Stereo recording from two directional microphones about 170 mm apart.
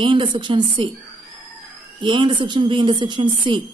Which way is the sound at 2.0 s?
30° right (ahead or behind).